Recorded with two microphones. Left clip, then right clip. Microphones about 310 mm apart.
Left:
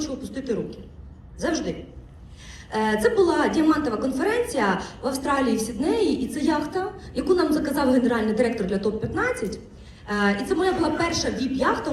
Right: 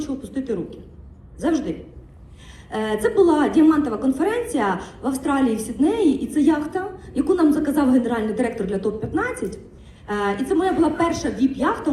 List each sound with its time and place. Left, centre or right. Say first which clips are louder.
0.0 s a sound: right 2 dB; right
1.4 s a woman's voice: right 4 dB; right
2.7 s a woman's voice: right 1 dB; right